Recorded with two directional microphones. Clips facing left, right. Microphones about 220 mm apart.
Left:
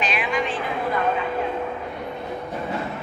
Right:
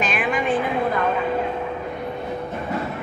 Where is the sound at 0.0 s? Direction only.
50° right (ahead or behind).